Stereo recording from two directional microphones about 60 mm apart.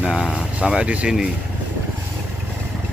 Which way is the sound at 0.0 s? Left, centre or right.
Centre.